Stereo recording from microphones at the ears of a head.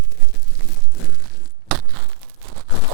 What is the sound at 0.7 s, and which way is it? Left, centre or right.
Crumpling, left.